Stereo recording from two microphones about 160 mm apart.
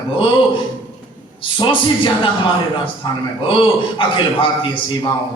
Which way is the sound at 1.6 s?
30° left (ahead or behind).